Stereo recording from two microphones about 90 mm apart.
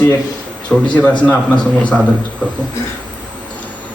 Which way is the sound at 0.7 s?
20° left (ahead or behind).